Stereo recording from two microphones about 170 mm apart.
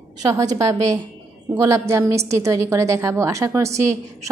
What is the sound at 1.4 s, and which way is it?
A woman's voice, 20° right (ahead or behind).